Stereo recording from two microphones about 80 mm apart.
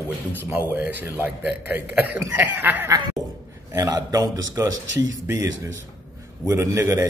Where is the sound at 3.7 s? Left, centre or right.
Right.